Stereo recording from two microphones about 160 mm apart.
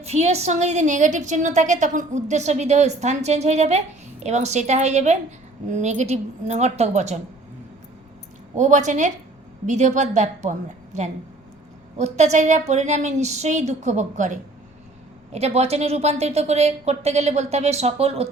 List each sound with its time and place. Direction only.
0.0 s a woman's voice: 40° right (ahead or behind)
8.5 s a woman's voice: 50° right (ahead or behind)